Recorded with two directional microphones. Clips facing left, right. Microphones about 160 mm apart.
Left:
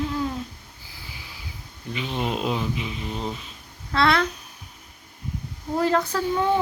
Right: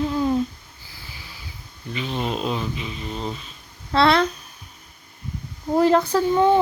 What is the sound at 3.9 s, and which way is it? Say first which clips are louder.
Speech: right 4 dB; 30° right (ahead or behind).